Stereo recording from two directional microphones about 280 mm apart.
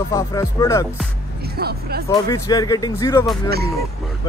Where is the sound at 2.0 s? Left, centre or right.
Centre.